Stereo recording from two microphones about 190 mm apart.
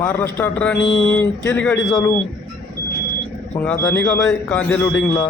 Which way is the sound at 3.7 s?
10° left (ahead or behind).